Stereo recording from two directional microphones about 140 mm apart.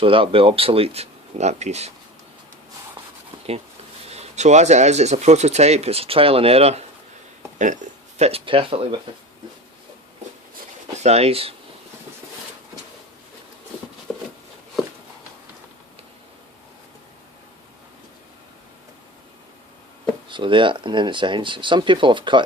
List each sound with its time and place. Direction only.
0.0 s speech: 40° right (ahead or behind)
4.1 s speech: 50° right (ahead or behind)
7.6 s a sound: 60° right (ahead or behind)
8.3 s speech: 40° right (ahead or behind)
10.9 s speech: 50° right (ahead or behind)
14.1 s a sound: 5° left (ahead or behind)
20.3 s speech: 35° right (ahead or behind)